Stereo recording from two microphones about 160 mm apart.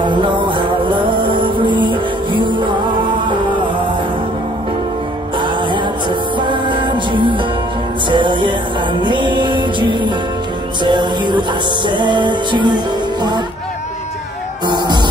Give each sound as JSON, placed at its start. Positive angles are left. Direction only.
{"t": 0.0, "sound": "music", "side_deg": -30}
{"t": 5.4, "sound": "music", "side_deg": -30}
{"t": 14.7, "sound": "music", "side_deg": -25}